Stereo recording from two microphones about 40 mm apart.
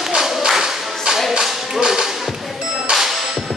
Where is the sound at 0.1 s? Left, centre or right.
Centre.